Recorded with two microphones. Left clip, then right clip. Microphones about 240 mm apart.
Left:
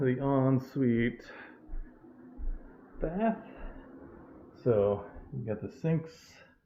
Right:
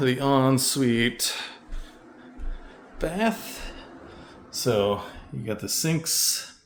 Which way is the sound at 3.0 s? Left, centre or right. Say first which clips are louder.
Right 6 dB; centre.